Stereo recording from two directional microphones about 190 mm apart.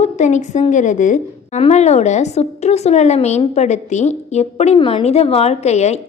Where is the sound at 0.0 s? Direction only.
40° left (ahead or behind).